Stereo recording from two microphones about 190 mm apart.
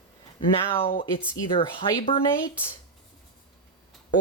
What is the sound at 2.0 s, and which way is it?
Speech, 30° left (ahead or behind).